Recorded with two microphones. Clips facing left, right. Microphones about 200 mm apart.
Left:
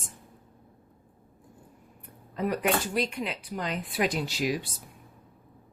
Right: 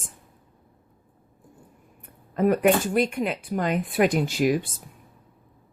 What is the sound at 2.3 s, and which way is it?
A woman's voice, 50° right (ahead or behind).